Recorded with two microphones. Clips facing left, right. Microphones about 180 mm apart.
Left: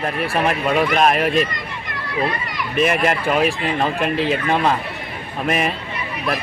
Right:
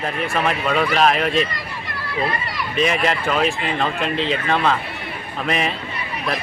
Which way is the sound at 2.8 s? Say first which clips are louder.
Left 2 dB; 50° left (ahead or behind).